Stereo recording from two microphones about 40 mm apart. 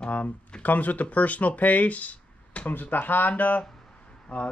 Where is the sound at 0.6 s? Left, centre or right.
Left.